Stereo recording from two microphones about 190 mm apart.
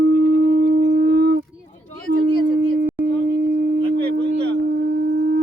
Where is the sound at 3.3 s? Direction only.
65° right (ahead or behind).